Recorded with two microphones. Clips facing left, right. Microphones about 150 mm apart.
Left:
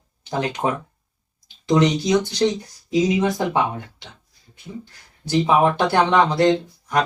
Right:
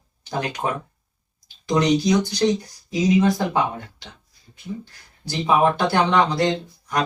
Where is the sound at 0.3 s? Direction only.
25° left (ahead or behind).